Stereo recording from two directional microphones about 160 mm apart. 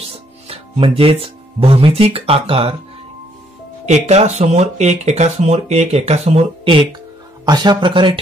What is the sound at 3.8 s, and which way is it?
Speech, 45° right (ahead or behind).